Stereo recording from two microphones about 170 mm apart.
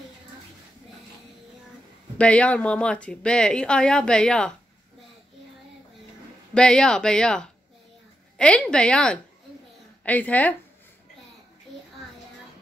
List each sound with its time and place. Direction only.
2.1 s a woman's voice: 5° left (ahead or behind)
6.5 s a woman's voice: 5° left (ahead or behind)